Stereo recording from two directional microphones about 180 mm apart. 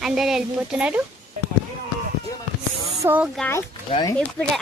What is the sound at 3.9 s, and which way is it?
Speech, 20° left (ahead or behind).